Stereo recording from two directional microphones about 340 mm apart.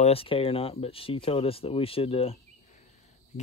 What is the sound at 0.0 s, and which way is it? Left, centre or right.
Speech, centre.